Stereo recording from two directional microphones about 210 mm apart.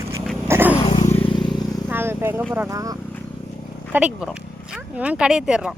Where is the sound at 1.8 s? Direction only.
10° right (ahead or behind).